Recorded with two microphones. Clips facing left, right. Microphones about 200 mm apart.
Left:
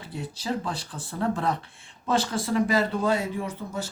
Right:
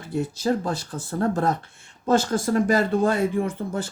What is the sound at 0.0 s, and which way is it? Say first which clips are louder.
Speech: right 9 dB; 45° right (ahead or behind).